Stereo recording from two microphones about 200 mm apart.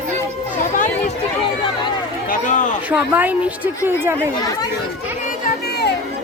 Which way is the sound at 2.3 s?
40° left (ahead or behind).